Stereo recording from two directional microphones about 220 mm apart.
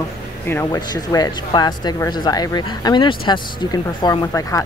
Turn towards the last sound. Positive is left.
turn(degrees=15)  # may be behind; listen again after turning